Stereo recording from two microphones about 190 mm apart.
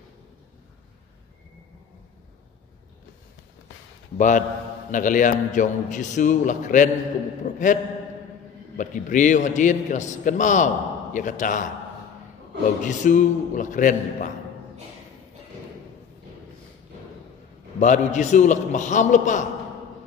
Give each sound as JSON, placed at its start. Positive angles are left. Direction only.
{"t": 4.2, "sound": "a man's voice", "side_deg": 40}
{"t": 12.8, "sound": "a man's voice", "side_deg": 40}
{"t": 17.7, "sound": "a man's voice", "side_deg": 40}